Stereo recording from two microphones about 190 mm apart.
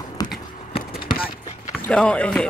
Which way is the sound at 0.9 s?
50° left (ahead or behind).